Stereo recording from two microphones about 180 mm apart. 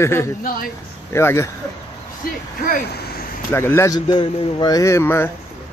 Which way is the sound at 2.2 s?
55° left (ahead or behind).